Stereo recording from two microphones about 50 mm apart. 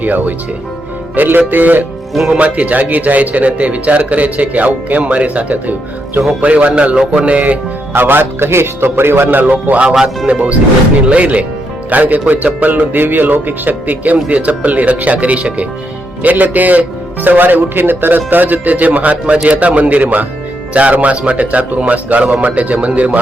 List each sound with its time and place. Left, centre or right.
0.0 s speech: right
2.3 s speech: right
8.0 s a man's voice: right
9.5 s speech: right
9.9 s speech: centre
10.2 s speech: right